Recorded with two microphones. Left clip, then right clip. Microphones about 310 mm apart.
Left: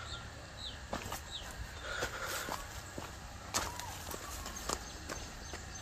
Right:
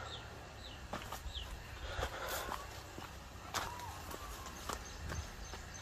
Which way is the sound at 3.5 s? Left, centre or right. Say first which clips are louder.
Left 3 dB; left.